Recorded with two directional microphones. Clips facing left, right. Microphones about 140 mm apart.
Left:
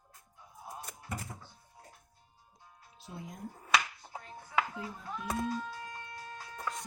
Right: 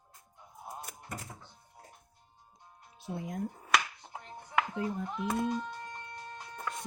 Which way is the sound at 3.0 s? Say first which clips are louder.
Right 7 dB; 60° right (ahead or behind).